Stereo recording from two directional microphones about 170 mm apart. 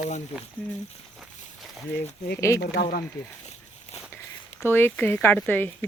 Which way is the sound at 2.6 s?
70° left (ahead or behind).